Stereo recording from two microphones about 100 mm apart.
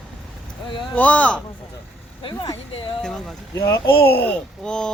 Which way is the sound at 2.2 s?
55° left (ahead or behind).